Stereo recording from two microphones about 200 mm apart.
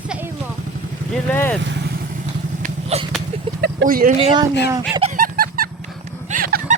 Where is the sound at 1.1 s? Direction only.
10° left (ahead or behind).